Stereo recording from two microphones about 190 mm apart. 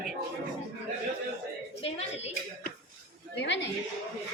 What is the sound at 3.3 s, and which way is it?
Speech, 65° left (ahead or behind).